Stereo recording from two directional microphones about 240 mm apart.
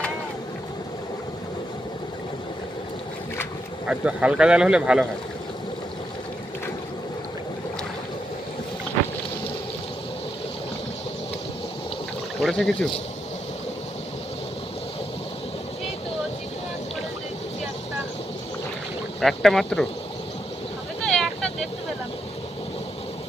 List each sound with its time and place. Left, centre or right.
3.8 s a man's voice: centre
12.4 s speech: centre
19.2 s a man's voice: centre
21.0 s vehicle: centre